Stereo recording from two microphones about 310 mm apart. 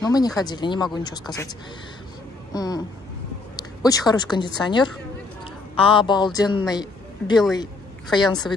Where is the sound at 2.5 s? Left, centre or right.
Centre.